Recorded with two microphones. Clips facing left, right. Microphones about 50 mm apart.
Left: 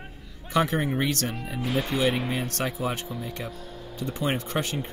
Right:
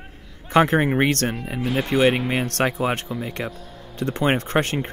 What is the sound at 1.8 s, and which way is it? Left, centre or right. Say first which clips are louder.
Speech: right 9 dB; right.